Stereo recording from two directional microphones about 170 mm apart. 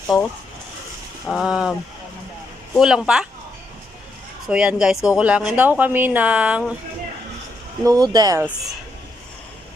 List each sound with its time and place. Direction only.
0.1 s speech: centre (ahead or behind)
1.3 s speech: centre (ahead or behind)
2.7 s speech: 5° right (ahead or behind)
4.4 s speech: 5° right (ahead or behind)
7.9 s speech: 20° right (ahead or behind)